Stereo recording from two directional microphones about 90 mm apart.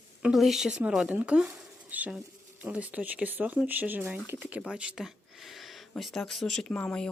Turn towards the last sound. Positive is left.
turn(degrees=10)  # may be behind; listen again after turning